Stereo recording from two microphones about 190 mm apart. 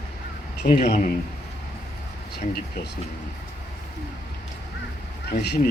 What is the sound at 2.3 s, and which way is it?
Speech, 55° left (ahead or behind).